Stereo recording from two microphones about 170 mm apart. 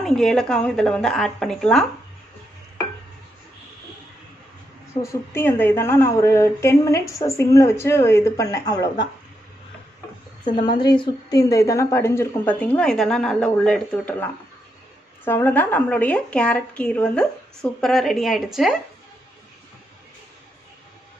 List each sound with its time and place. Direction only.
0.0 s a woman's voice: centre (ahead or behind)
5.0 s a woman's voice: 15° left (ahead or behind)
10.5 s a woman's voice: 25° left (ahead or behind); by 14.1 s 5° left (ahead or behind)
15.2 s a woman's voice: 10° left (ahead or behind)